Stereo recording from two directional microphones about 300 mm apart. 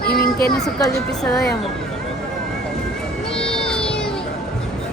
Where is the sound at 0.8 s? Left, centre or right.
Centre.